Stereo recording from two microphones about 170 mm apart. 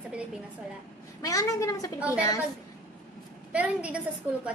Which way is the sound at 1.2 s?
20° left (ahead or behind).